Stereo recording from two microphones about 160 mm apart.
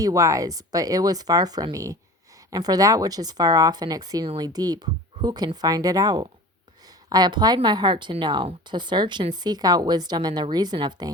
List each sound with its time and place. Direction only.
0.0 s speech: 20° right (ahead or behind)